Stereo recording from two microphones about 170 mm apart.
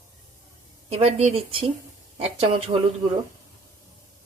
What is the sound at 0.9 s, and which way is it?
Speech, 35° right (ahead or behind).